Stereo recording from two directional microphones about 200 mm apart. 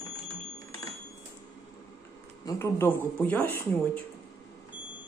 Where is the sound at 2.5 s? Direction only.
15° left (ahead or behind).